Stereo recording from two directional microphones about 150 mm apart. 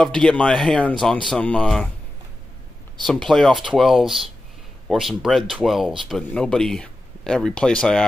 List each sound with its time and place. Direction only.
0.0 s speech: 5° left (ahead or behind)
3.1 s speech: centre (ahead or behind)